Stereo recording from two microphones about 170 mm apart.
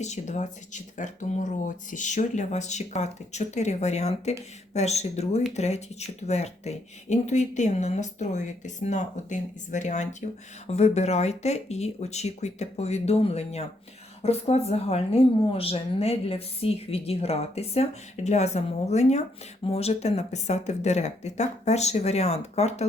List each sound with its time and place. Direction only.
0.0 s speech: 45° left (ahead or behind)